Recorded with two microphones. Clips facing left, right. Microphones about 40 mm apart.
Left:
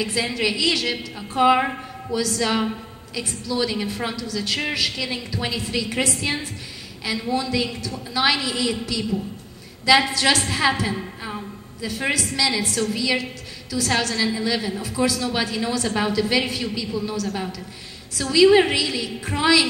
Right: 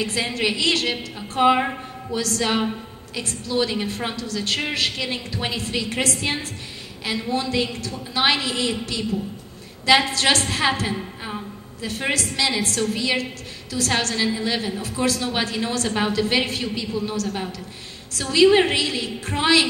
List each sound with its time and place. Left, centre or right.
0.0 s a woman's voice: right
1.6 s a woman's voice: centre
2.1 s a woman's voice: right
7.1 s a woman's voice: right
10.4 s a woman's voice: right
12.1 s a woman's voice: right